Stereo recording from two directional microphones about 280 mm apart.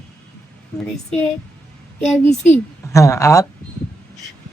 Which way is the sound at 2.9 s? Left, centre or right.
Centre.